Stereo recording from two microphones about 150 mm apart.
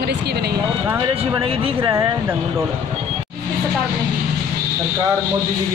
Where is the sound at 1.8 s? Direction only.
20° right (ahead or behind).